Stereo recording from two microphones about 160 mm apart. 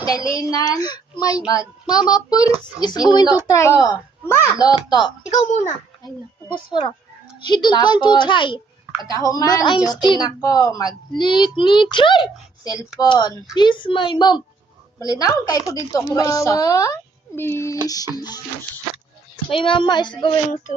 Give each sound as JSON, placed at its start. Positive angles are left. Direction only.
{"t": 0.0, "sound": "a woman's voice", "side_deg": 20}
{"t": 5.3, "sound": "a child's voice", "side_deg": 45}
{"t": 6.5, "sound": "a woman's voice", "side_deg": 30}
{"t": 19.5, "sound": "speech", "side_deg": 30}